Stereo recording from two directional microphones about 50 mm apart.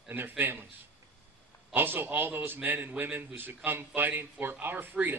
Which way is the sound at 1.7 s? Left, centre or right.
Right.